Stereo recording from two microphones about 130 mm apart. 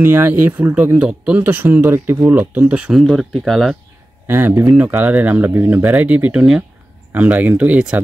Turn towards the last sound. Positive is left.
turn(degrees=-10)  # may be behind; listen again after turning